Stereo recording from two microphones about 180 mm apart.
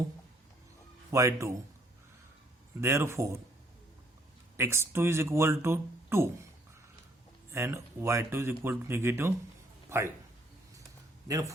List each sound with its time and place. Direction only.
1.1 s speech: 15° right (ahead or behind)
2.8 s speech: 15° right (ahead or behind)
4.5 s speech: 15° right (ahead or behind)
7.5 s speech: 15° right (ahead or behind)
11.3 s speech: 20° right (ahead or behind)